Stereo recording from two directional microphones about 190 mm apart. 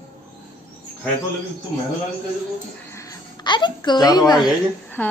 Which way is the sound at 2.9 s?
15° left (ahead or behind).